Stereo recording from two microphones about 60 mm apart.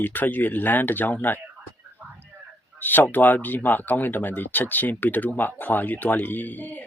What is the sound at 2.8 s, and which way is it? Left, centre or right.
Speech, left.